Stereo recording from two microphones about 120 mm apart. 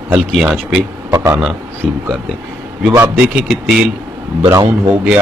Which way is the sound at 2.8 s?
15° right (ahead or behind).